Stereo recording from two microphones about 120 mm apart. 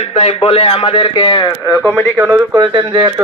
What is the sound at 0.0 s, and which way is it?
A man's voice, 55° left (ahead or behind).